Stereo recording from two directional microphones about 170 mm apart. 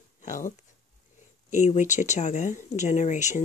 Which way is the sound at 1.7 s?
45° left (ahead or behind).